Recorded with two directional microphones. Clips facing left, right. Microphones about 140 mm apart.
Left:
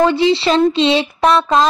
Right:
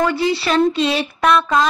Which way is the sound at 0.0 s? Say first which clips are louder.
Left 5 dB; 25° left (ahead or behind).